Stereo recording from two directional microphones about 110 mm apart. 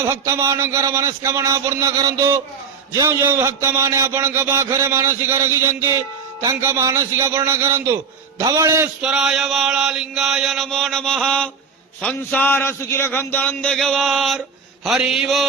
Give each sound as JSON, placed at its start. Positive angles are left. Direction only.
{"t": 0.0, "sound": "a man's voice", "side_deg": -25}
{"t": 9.0, "sound": "chant", "side_deg": -5}
{"t": 12.0, "sound": "a man's voice", "side_deg": 15}
{"t": 14.8, "sound": "chant", "side_deg": -5}